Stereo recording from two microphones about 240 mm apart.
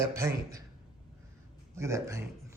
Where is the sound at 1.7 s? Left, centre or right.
Centre.